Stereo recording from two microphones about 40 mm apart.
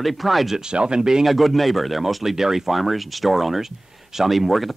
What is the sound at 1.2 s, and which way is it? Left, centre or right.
Speech, centre.